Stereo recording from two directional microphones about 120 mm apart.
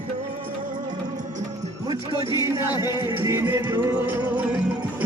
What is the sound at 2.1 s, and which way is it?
Music, 30° left (ahead or behind).